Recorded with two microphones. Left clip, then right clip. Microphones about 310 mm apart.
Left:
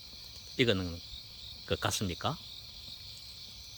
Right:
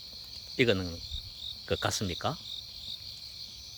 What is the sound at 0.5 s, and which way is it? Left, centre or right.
Speech, centre.